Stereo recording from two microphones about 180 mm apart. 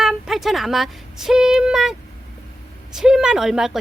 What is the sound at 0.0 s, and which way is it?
Speech, centre (ahead or behind).